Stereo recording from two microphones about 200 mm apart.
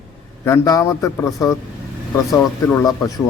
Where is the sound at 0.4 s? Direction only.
15° left (ahead or behind).